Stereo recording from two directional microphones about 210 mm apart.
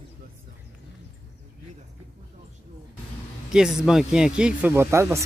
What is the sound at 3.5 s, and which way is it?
Speech, 5° right (ahead or behind).